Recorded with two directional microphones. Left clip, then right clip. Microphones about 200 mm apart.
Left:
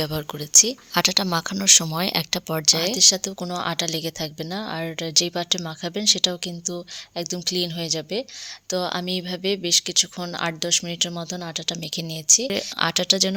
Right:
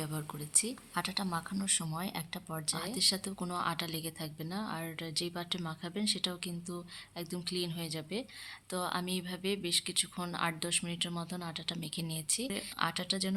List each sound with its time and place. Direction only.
0.0 s speech: 40° left (ahead or behind)